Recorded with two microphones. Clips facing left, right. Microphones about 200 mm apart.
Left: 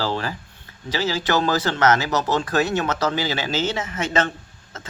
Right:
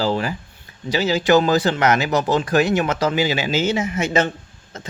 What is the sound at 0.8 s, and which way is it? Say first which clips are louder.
Speech: right 6 dB; 15° right (ahead or behind).